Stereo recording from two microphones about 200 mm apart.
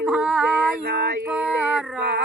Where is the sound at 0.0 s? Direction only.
5° right (ahead or behind).